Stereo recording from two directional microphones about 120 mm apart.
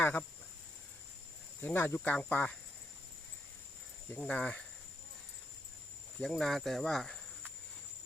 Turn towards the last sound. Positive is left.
turn(degrees=5)  # may be behind; listen again after turning